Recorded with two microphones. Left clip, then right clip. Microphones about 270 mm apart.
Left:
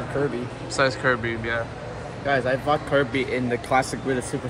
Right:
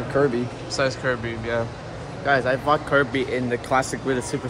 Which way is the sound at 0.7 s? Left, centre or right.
Centre.